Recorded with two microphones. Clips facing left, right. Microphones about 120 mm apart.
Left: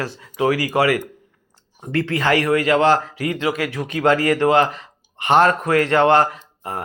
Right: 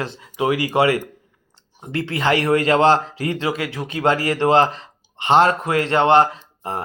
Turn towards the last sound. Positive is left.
turn(degrees=-25)  # may be behind; listen again after turning